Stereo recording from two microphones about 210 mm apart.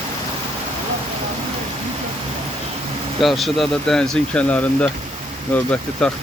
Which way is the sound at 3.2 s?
Centre (ahead or behind).